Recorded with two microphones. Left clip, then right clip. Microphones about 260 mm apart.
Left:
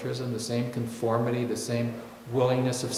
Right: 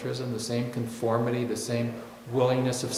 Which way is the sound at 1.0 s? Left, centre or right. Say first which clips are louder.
Even; centre.